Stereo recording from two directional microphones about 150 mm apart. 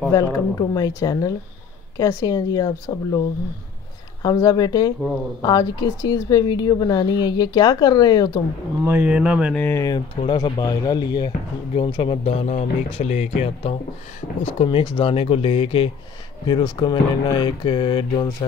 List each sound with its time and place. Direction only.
0.1 s a woman's voice: 25° left (ahead or behind)
4.2 s a woman's voice: 25° left (ahead or behind)
8.8 s speech: 10° right (ahead or behind)
9.5 s speech: 15° left (ahead or behind)
9.8 s speech: 30° left (ahead or behind)